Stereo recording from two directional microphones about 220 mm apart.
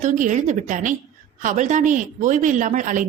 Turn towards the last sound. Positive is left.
turn(degrees=-35)  # may be behind; listen again after turning